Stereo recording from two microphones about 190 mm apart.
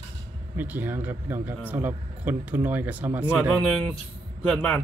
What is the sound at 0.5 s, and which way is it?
Speech, 10° right (ahead or behind).